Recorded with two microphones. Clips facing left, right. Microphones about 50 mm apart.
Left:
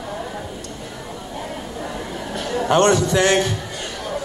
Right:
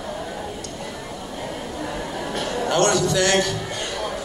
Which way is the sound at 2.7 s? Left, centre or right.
Left.